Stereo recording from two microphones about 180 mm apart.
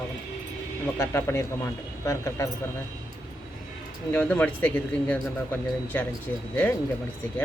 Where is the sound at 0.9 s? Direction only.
15° left (ahead or behind).